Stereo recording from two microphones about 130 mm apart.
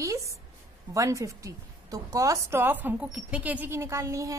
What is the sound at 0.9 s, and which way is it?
A woman's voice, 25° right (ahead or behind).